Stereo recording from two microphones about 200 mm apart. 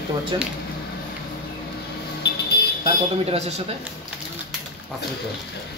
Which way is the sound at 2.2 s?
55° left (ahead or behind).